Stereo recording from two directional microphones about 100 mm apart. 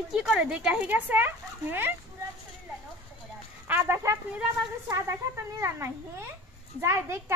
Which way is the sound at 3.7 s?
20° right (ahead or behind).